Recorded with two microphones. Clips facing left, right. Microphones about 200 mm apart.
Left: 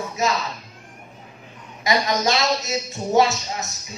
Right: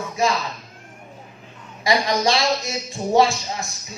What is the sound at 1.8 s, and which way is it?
Speech, 30° right (ahead or behind).